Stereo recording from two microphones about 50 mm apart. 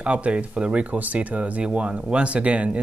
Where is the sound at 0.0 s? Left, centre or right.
Right.